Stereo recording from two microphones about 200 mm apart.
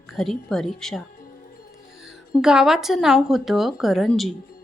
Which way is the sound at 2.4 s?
5° right (ahead or behind).